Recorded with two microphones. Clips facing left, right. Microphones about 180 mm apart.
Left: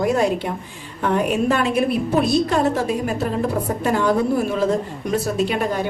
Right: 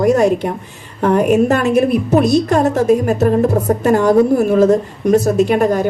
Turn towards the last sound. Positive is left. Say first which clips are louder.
# right 8 dB
turn(degrees=-45)  # may be behind; listen again after turning